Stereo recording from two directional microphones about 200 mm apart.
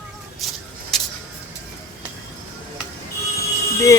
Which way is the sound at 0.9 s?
Centre (ahead or behind).